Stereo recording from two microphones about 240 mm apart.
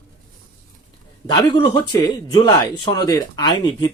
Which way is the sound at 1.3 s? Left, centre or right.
Centre.